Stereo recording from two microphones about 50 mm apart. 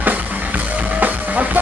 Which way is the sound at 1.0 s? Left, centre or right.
Right.